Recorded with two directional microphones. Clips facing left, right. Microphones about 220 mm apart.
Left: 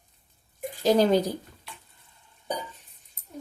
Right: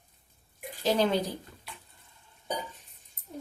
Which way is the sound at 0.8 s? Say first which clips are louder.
Left 6 dB; 40° left (ahead or behind).